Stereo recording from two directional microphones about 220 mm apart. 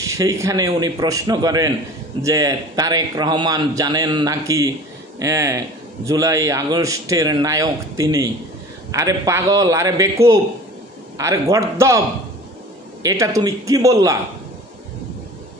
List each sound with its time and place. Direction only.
0.0 s a man's voice: 15° right (ahead or behind)
11.1 s a man's voice: 15° right (ahead or behind)
13.0 s a man's voice: 15° right (ahead or behind)